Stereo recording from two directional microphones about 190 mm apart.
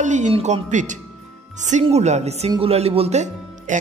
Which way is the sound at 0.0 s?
40° right (ahead or behind).